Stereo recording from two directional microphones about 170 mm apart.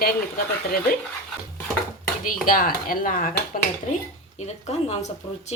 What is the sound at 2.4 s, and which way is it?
Speech, 55° left (ahead or behind).